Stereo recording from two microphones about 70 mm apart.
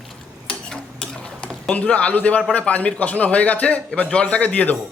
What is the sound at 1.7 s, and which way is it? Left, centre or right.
A man's voice, centre.